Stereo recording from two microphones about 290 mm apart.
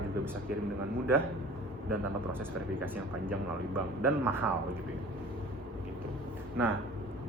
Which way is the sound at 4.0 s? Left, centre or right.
Centre.